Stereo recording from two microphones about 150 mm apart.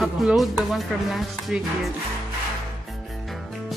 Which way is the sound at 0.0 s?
Centre (ahead or behind).